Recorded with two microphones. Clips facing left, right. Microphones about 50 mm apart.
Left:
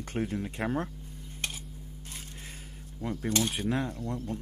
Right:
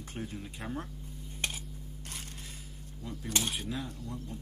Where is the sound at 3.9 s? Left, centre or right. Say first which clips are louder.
Left 7 dB; left.